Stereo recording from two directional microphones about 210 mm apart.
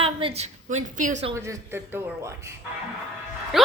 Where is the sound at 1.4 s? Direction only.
10° right (ahead or behind).